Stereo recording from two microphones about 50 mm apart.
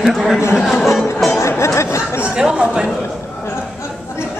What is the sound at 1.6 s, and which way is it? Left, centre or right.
Chatter, left.